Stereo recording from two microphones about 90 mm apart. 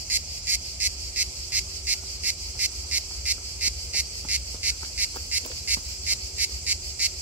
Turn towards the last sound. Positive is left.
turn(degrees=-15)  # may be behind; listen again after turning